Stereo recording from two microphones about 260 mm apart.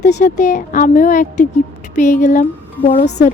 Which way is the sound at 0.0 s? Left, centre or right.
Left.